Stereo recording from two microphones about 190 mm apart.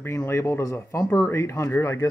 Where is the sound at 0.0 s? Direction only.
15° left (ahead or behind).